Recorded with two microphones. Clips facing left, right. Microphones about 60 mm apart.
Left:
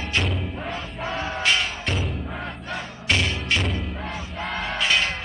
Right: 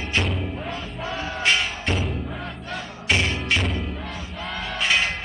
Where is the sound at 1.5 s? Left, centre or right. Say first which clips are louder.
Right 2 dB; centre.